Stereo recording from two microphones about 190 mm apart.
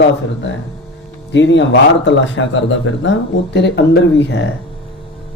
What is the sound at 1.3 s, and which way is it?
Speech, 70° left (ahead or behind).